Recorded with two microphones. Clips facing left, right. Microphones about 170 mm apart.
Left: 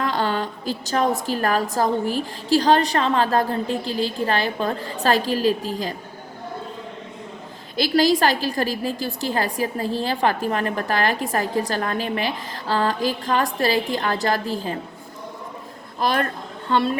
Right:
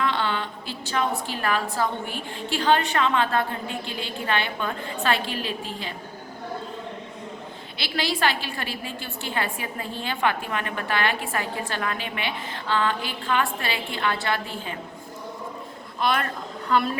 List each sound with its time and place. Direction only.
0.0 s a woman's voice: 40° left (ahead or behind)
7.8 s a woman's voice: 40° left (ahead or behind)
16.0 s speech: 35° left (ahead or behind)